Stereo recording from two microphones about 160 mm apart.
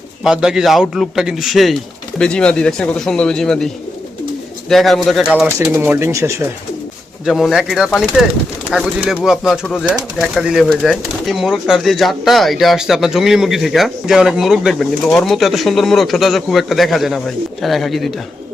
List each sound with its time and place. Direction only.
0.3 s speech: 5° right (ahead or behind)
4.7 s speech: centre (ahead or behind)
5.5 s speech: 15° right (ahead or behind)
7.3 s speech: centre (ahead or behind)